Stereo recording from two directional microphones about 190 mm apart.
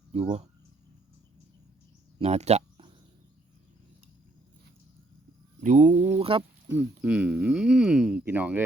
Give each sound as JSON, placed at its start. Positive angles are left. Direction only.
{"t": 0.1, "sound": "speech", "side_deg": -35}
{"t": 2.1, "sound": "a sound", "side_deg": -35}
{"t": 5.5, "sound": "speech", "side_deg": -40}
{"t": 6.7, "sound": "speech", "side_deg": -5}